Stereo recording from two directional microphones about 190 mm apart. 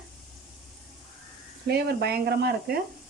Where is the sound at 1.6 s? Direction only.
55° right (ahead or behind).